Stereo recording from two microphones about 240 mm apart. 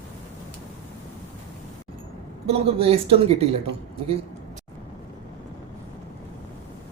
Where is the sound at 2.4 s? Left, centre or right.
Right.